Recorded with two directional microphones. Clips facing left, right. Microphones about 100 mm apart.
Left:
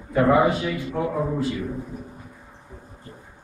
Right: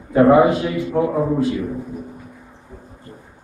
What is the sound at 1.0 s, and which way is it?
Speech, 20° right (ahead or behind).